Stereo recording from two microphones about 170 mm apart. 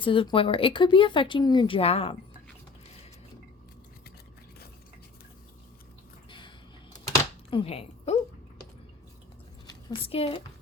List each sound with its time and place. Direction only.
0.0 s speech: 30° left (ahead or behind)
7.5 s speech: 35° left (ahead or behind)
9.6 s a woman's voice: 30° left (ahead or behind)